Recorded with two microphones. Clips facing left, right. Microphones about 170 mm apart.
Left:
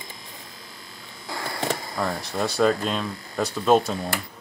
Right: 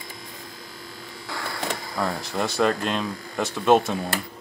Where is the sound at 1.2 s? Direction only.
25° left (ahead or behind).